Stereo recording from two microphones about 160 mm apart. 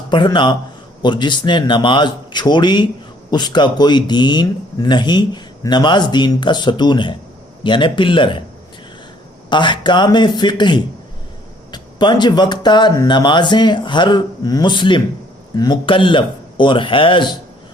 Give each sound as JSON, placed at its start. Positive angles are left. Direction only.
{"t": 0.1, "sound": "speech", "side_deg": 30}
{"t": 9.5, "sound": "speech", "side_deg": 30}